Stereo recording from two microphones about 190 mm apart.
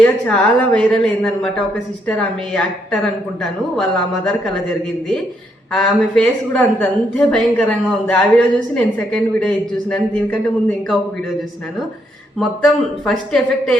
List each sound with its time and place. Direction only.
0.0 s a woman's voice: centre (ahead or behind)
5.7 s a woman's voice: 5° left (ahead or behind)
12.4 s a woman's voice: centre (ahead or behind)